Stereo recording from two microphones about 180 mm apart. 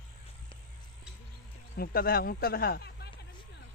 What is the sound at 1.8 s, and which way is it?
Speech, 55° left (ahead or behind).